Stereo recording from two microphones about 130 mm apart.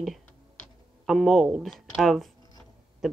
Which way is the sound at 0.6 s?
10° left (ahead or behind).